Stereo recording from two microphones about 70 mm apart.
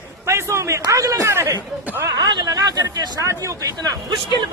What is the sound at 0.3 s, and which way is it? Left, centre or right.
Speech, right.